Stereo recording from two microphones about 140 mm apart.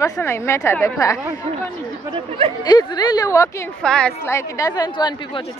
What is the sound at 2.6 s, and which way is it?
Speech, 30° left (ahead or behind).